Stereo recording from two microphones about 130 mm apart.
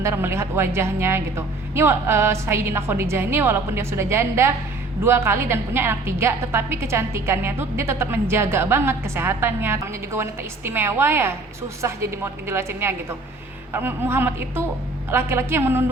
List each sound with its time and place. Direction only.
0.0 s a woman's voice: 20° right (ahead or behind)